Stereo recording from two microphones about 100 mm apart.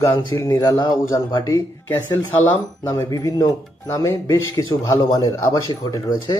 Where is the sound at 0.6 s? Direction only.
40° left (ahead or behind).